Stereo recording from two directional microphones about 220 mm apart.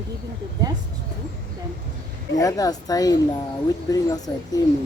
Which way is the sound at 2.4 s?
15° left (ahead or behind).